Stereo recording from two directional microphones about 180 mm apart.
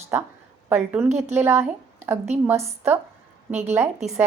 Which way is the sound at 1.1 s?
40° right (ahead or behind).